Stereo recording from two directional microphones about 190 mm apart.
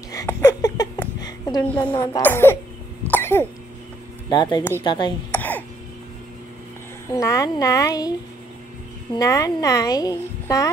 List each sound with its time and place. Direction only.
0.1 s a sound: 15° left (ahead or behind)
2.0 s speech: 15° left (ahead or behind)
3.1 s cough: 10° left (ahead or behind)
4.3 s speech: 25° left (ahead or behind)
5.3 s throat clearing: 10° left (ahead or behind)
7.1 s speech: 15° left (ahead or behind)
9.1 s speech: 20° left (ahead or behind)